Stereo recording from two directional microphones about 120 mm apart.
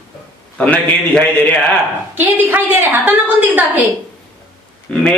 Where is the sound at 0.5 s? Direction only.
10° left (ahead or behind).